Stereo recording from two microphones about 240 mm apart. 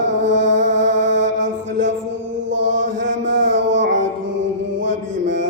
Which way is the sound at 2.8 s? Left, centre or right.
Right.